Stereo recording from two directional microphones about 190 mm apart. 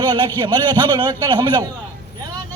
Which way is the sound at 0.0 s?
20° right (ahead or behind).